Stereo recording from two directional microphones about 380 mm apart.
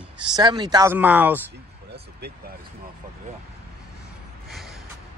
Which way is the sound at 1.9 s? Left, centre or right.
Right.